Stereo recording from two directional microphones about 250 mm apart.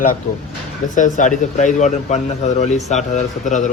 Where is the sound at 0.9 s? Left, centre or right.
Left.